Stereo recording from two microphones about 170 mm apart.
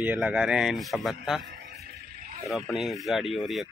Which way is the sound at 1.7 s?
65° right (ahead or behind).